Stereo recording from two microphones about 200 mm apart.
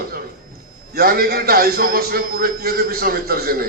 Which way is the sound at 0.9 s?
50° right (ahead or behind).